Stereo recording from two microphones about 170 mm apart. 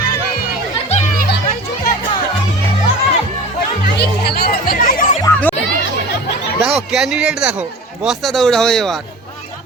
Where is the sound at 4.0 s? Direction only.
70° left (ahead or behind); by 5.2 s 55° left (ahead or behind).